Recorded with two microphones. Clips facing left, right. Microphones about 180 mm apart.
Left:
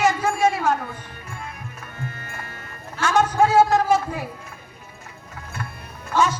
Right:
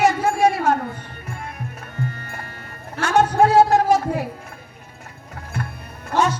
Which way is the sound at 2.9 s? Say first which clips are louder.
Right 2 dB; 65° right (ahead or behind).